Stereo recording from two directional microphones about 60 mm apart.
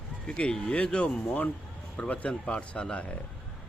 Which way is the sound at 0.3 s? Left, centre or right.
Centre.